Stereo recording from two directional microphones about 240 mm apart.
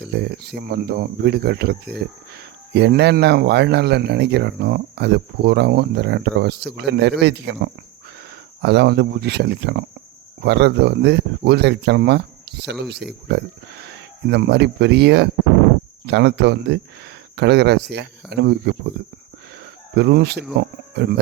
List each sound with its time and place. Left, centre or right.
0.0 s speech: right
20.0 s speech: right